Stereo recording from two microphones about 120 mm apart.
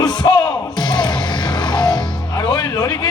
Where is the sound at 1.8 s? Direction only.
5° left (ahead or behind).